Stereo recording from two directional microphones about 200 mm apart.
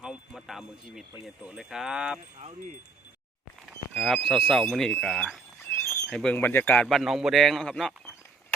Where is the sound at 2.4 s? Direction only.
30° right (ahead or behind).